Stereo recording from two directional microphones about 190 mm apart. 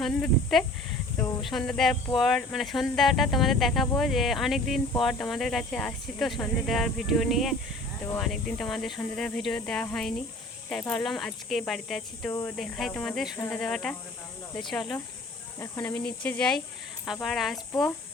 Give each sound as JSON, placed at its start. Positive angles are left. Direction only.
{"t": 0.0, "sound": "speech", "side_deg": 0}
{"t": 12.3, "sound": "speech", "side_deg": 15}
{"t": 12.5, "sound": "speech", "side_deg": 0}